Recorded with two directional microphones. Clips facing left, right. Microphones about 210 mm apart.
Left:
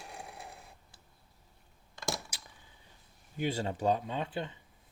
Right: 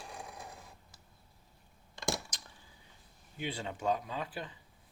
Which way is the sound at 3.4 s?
40° left (ahead or behind).